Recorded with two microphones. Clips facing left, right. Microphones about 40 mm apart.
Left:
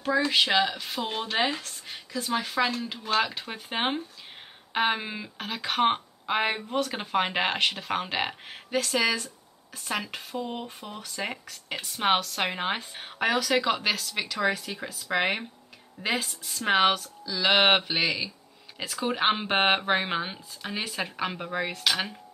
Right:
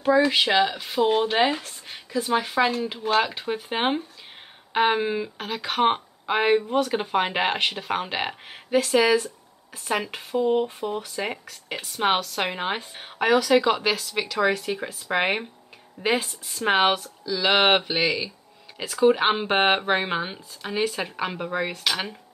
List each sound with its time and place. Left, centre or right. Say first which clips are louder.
0.0 s speech: right 5 dB; centre
14.7 s speech: right 4 dB; centre
16.3 s speech: right 3 dB; centre
17.2 s speech: right 2 dB; centre